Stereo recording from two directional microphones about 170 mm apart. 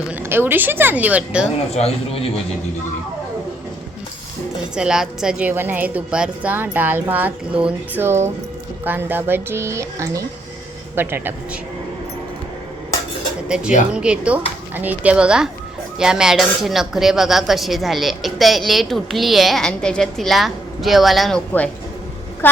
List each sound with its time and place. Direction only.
0.2 s a woman's voice: 10° right (ahead or behind)
1.7 s a man's voice: 35° left (ahead or behind)
4.7 s a woman's voice: 5° right (ahead or behind)
13.5 s a woman's voice: 5° right (ahead or behind)